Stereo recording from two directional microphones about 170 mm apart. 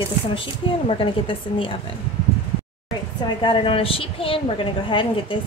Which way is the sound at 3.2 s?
30° left (ahead or behind).